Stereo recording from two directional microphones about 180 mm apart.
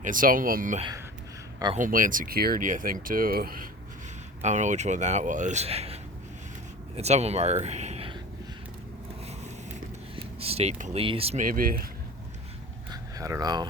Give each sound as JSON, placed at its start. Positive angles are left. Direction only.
{"t": 0.0, "sound": "speech", "side_deg": -50}
{"t": 4.4, "sound": "speech", "side_deg": -40}
{"t": 10.2, "sound": "speech", "side_deg": -35}
{"t": 11.4, "sound": "speech", "side_deg": -50}
{"t": 12.9, "sound": "a sound", "side_deg": -20}